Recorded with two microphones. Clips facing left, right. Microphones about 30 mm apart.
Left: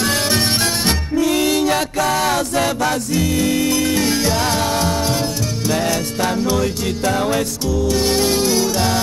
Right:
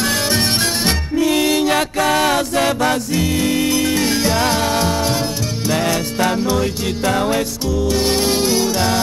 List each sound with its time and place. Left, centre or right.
0.8 s music: centre
1.3 s music: right
1.7 s chant: right
3.1 s music: centre
6.3 s music: centre